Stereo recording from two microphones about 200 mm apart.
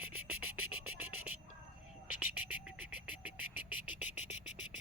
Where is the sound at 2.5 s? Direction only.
5° right (ahead or behind).